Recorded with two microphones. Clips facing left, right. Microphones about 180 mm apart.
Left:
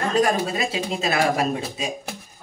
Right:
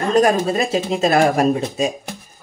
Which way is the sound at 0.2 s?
45° right (ahead or behind).